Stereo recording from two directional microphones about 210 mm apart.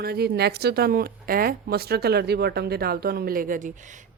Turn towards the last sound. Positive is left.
turn(degrees=-35)  # may be behind; listen again after turning